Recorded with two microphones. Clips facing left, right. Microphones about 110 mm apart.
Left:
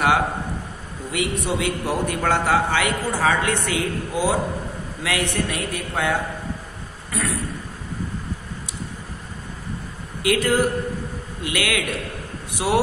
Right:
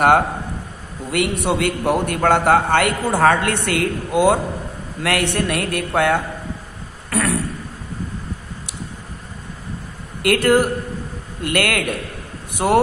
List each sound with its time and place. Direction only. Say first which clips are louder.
1.1 s a man's voice: right 4 dB; 65° right (ahead or behind)
7.1 s a sound: right 6 dB; 65° right (ahead or behind)
10.2 s a man's voice: right 4 dB; 60° right (ahead or behind)